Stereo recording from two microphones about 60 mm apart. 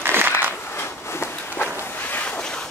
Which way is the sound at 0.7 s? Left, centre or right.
Left.